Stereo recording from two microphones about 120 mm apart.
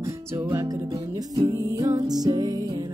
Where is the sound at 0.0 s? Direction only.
25° right (ahead or behind).